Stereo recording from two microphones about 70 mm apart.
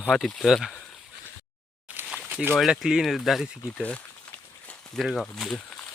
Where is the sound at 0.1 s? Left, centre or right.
Centre.